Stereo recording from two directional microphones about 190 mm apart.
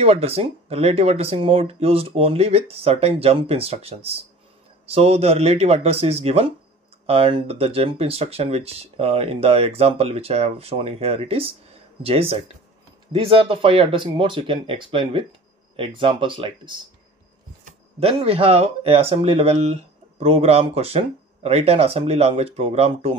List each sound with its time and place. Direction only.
0.0 s speech: 30° right (ahead or behind)
18.0 s speech: 30° right (ahead or behind)